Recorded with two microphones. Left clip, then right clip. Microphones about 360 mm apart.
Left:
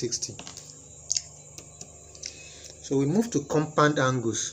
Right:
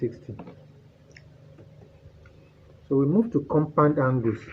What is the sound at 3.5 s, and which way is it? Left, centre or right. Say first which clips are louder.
Speech: right 1 dB; right.